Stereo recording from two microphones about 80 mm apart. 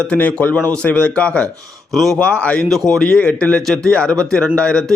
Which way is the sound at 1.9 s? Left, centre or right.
Centre.